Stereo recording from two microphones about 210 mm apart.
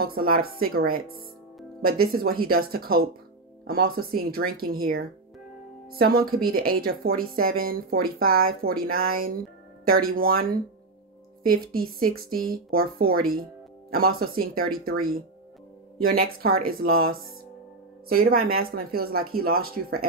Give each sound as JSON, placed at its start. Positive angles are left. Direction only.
{"t": 0.0, "sound": "speech", "side_deg": -45}